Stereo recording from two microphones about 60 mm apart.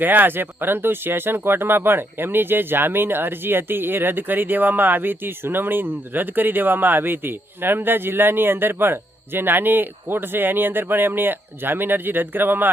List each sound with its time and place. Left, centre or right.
0.0 s speech: right